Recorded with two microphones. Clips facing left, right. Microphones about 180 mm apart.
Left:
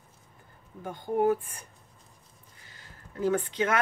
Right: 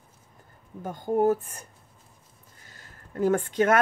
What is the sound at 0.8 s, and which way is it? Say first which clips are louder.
Speech: right 3 dB; 45° right (ahead or behind).